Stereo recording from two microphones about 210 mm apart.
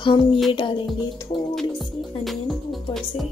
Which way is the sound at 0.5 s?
25° left (ahead or behind).